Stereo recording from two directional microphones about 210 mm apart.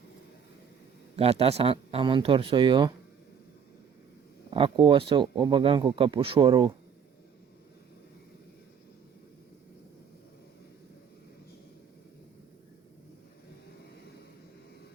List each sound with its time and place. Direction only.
1.1 s speech: 30° right (ahead or behind)
4.5 s speech: 25° right (ahead or behind)